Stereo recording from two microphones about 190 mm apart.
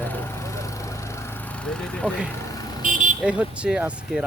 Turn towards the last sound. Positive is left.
turn(degrees=-5)  # may be behind; listen again after turning